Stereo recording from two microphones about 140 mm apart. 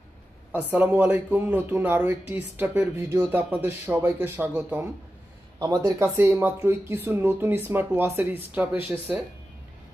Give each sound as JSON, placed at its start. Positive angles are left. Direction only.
{"t": 0.5, "sound": "speech", "side_deg": -10}